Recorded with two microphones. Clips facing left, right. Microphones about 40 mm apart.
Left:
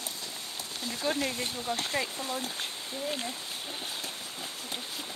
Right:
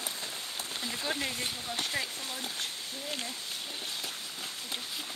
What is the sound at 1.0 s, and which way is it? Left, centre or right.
Speech, centre.